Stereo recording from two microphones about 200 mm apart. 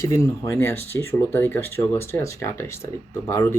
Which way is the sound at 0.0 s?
15° left (ahead or behind).